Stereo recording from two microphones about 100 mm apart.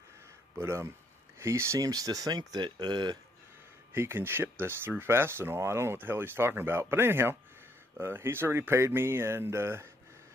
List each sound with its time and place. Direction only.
0.6 s speech: 25° right (ahead or behind); by 3.2 s 45° right (ahead or behind)
3.9 s speech: 25° right (ahead or behind)